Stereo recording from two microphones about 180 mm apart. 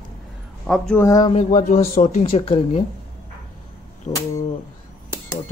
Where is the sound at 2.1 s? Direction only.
35° left (ahead or behind).